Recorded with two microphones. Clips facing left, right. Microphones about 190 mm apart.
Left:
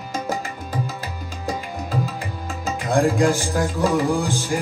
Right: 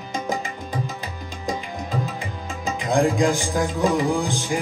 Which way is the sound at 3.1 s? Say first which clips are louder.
Left 1 dB; 15° right (ahead or behind).